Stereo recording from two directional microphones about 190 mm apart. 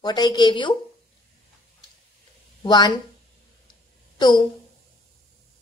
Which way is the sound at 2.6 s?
20° left (ahead or behind).